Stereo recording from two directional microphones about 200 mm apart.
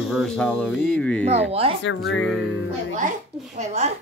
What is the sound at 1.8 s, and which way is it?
Speech, 70° left (ahead or behind).